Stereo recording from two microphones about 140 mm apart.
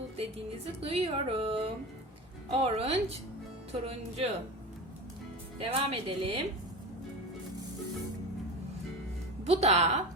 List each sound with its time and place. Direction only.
0.2 s speech: 45° right (ahead or behind)
5.5 s speech: 40° right (ahead or behind)
9.4 s speech: 50° right (ahead or behind)